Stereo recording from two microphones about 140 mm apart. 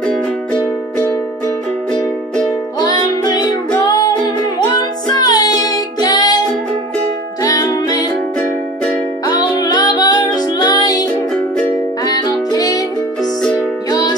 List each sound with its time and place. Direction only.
2.8 s music: 30° left (ahead or behind)
7.4 s music: 25° left (ahead or behind)
9.2 s music: 25° left (ahead or behind)
13.2 s music: centre (ahead or behind)
13.8 s music: 30° left (ahead or behind)